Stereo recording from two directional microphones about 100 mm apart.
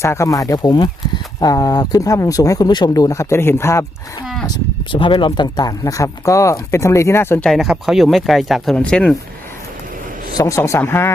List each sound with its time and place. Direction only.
0.0 s speech: 30° left (ahead or behind)
4.4 s speech: 50° left (ahead or behind)
5.8 s speech: 35° left (ahead or behind)
7.4 s speech: centre (ahead or behind)
10.3 s speech: 30° left (ahead or behind)